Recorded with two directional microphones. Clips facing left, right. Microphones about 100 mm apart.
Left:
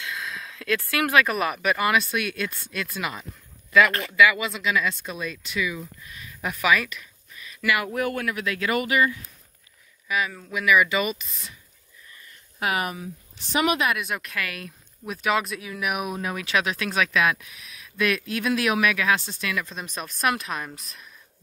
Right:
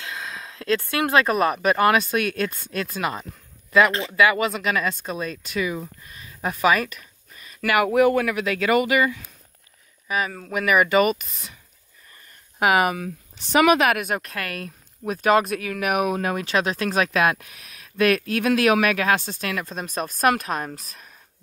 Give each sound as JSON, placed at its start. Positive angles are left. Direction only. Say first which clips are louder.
{"t": 0.0, "sound": "speech", "louder": "even", "side_deg": -35}
{"t": 4.2, "sound": "speech", "louder": "right 1 dB", "side_deg": -40}
{"t": 7.8, "sound": "speech", "louder": "right 9 dB", "side_deg": -90}
{"t": 10.0, "sound": "speech", "louder": "right 1 dB", "side_deg": -40}
{"t": 12.5, "sound": "speech", "louder": "right 7 dB", "side_deg": -90}
{"t": 16.3, "sound": "speech", "louder": "right 3 dB", "side_deg": -35}